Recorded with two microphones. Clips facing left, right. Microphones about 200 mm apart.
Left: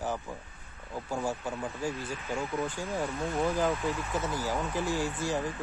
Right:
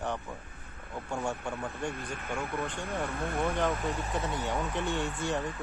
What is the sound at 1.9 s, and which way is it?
Speech, 55° right (ahead or behind).